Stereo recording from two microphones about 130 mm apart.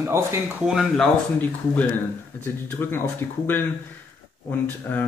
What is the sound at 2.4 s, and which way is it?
Speech, 15° left (ahead or behind).